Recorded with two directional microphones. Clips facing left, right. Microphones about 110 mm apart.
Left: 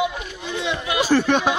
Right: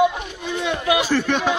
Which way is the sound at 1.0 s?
35° left (ahead or behind).